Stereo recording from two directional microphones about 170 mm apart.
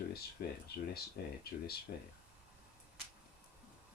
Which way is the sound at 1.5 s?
65° left (ahead or behind).